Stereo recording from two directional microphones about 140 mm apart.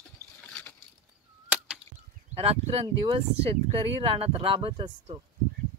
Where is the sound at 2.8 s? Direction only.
35° right (ahead or behind).